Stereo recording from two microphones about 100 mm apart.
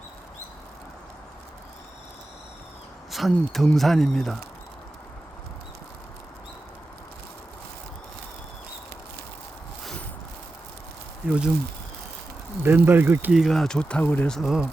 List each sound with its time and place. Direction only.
3.1 s speech: centre (ahead or behind)
11.3 s speech: 10° right (ahead or behind)
12.6 s speech: 20° right (ahead or behind)
13.3 s speech: centre (ahead or behind); by 14.3 s 15° left (ahead or behind)
14.3 s speech: centre (ahead or behind)